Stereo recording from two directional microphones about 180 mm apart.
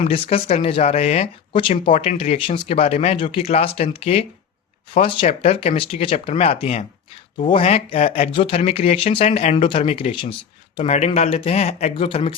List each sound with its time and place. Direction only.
0.0 s speech: 35° left (ahead or behind)